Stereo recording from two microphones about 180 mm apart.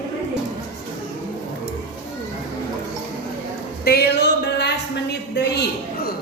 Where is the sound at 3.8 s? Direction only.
60° left (ahead or behind).